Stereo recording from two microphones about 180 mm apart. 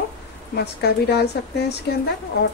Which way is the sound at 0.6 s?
65° left (ahead or behind).